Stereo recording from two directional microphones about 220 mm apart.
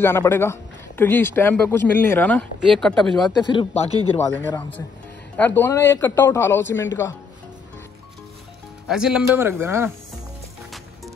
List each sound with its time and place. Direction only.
0.0 s speech: 10° left (ahead or behind)
3.3 s speech: 20° left (ahead or behind)
4.2 s speech: 10° left (ahead or behind)
8.8 s speech: 5° right (ahead or behind)